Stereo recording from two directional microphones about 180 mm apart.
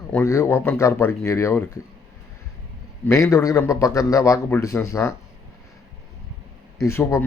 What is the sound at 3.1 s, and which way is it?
Speech, 15° left (ahead or behind).